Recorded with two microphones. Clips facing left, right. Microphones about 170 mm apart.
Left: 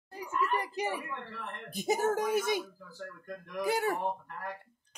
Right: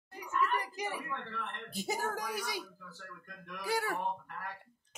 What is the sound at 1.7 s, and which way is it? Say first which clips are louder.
Speech: left 8 dB; 20° left (ahead or behind).